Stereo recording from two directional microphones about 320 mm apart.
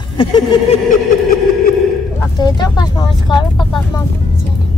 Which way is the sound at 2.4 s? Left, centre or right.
Centre.